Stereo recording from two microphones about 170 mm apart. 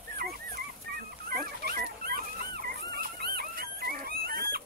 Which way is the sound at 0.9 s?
60° right (ahead or behind).